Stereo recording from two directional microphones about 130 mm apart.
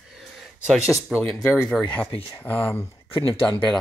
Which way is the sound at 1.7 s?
10° left (ahead or behind).